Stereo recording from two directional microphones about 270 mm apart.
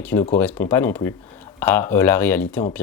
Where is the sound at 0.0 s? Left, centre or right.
Centre.